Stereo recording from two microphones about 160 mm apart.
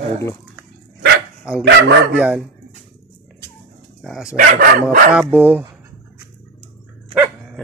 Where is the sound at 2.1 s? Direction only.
10° right (ahead or behind).